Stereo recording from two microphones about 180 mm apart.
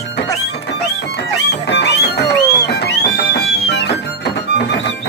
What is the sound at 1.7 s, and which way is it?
Music, 70° left (ahead or behind).